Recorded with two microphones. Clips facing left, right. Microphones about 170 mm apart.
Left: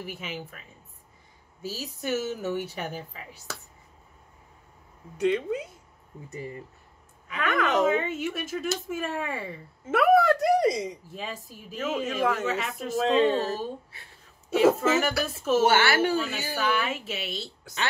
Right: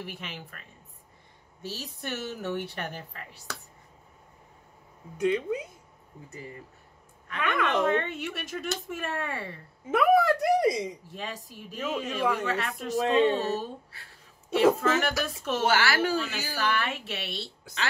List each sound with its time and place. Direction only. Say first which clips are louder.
0.0 s a woman's voice: left 3 dB; 5° left (ahead or behind)
5.1 s speech: left 1 dB; 10° right (ahead or behind)
7.2 s a woman's voice: left 2 dB; centre (ahead or behind)
11.1 s a woman's voice: left 1 dB; centre (ahead or behind)
14.8 s a woman's voice: left 2 dB; 5° left (ahead or behind)
15.6 s a woman's voice: left 1 dB; 25° left (ahead or behind)
16.5 s a woman's voice: left 2 dB; centre (ahead or behind)